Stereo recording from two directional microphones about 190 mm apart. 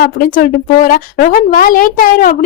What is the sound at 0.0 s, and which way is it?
A woman's voice, 50° left (ahead or behind).